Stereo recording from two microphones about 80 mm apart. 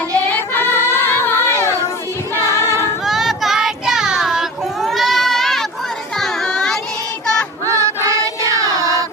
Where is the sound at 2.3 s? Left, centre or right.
Left.